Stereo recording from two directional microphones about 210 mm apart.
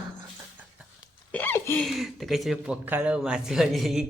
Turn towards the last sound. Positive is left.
turn(degrees=0)  # may be behind; listen again after turning